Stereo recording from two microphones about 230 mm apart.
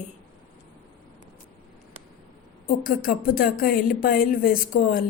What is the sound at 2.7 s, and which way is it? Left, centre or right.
Speech, left.